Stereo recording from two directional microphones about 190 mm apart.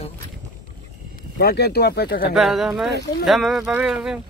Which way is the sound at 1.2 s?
55° left (ahead or behind).